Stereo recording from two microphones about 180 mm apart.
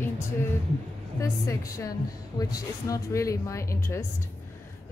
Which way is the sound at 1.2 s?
20° left (ahead or behind).